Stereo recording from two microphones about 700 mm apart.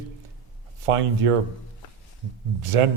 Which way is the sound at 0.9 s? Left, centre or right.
Right.